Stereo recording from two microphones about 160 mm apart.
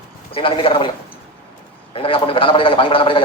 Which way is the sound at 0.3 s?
35° left (ahead or behind).